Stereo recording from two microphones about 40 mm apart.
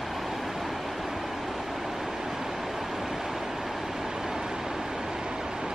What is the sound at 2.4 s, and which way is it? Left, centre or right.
Vehicle, centre.